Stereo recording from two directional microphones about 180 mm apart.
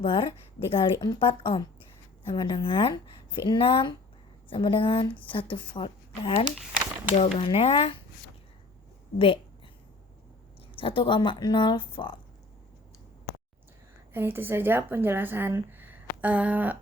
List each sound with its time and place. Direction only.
0.0 s a woman's voice: 30° left (ahead or behind)
9.1 s speech: 30° left (ahead or behind)
10.8 s a woman's voice: 30° left (ahead or behind)
14.1 s speech: 10° right (ahead or behind)